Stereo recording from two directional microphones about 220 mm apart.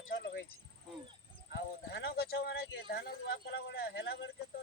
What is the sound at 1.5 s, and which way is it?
Speech, 50° left (ahead or behind).